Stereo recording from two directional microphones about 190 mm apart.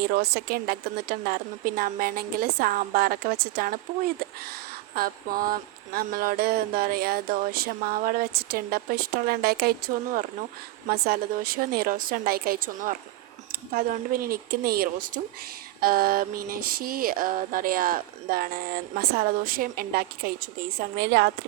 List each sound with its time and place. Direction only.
0.0 s a woman's voice: 55° right (ahead or behind)